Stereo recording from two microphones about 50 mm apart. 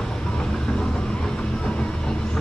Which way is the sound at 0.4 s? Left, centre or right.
Centre.